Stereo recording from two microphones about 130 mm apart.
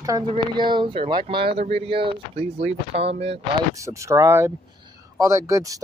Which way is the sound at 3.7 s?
25° right (ahead or behind).